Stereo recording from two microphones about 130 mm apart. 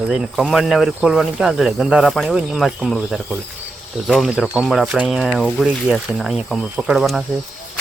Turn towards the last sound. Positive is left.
turn(degrees=0)  # may be behind; listen again after turning